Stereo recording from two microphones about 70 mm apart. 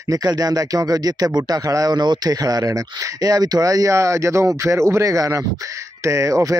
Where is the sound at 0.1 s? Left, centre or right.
Right.